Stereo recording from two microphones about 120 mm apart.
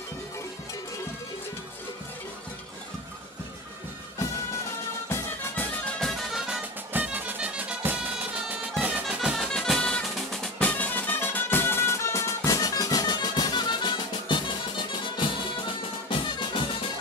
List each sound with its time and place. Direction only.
5.9 s music: centre (ahead or behind)
6.4 s music: 10° right (ahead or behind); by 14.5 s 45° left (ahead or behind)
16.1 s music: 45° left (ahead or behind)